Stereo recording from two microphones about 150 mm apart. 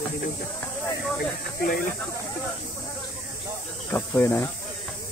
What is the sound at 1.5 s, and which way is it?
Speech, 75° left (ahead or behind).